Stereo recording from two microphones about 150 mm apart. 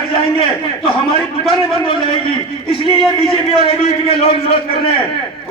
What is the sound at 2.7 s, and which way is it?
A man's voice, 35° left (ahead or behind).